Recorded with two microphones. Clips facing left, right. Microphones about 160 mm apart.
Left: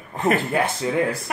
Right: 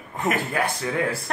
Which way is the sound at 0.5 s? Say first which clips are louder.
Left 3 dB; 20° left (ahead or behind).